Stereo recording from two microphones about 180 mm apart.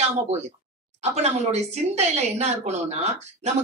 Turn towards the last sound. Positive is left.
turn(degrees=-35)  # may be behind; listen again after turning